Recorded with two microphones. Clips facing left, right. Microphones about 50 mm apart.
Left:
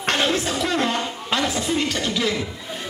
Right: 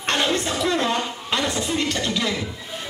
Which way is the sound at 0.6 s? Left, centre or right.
Left.